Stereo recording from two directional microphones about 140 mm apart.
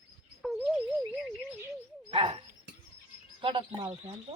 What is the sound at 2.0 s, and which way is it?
Dog, 40° right (ahead or behind).